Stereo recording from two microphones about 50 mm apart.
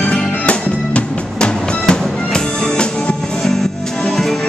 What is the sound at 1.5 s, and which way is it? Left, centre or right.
Music, centre.